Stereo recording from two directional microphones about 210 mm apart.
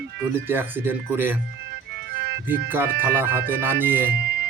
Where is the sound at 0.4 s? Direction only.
10° right (ahead or behind).